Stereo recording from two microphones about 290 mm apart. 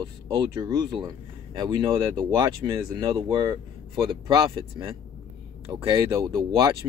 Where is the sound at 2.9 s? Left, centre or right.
Centre.